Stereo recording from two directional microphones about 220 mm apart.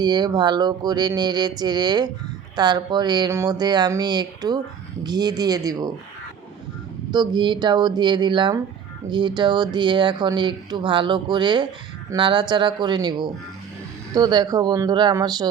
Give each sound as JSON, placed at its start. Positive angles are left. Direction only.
{"t": 0.0, "sound": "speech", "side_deg": -20}
{"t": 7.1, "sound": "speech", "side_deg": -20}